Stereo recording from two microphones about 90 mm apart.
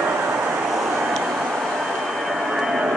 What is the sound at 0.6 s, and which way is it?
Vehicle, 5° right (ahead or behind).